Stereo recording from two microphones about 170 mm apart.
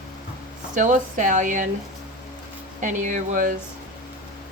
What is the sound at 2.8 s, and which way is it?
Speech, 50° right (ahead or behind).